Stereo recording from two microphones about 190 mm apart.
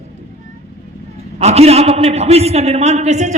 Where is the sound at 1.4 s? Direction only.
35° right (ahead or behind).